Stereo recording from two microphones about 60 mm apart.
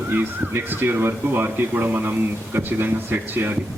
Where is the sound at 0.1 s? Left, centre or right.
Right.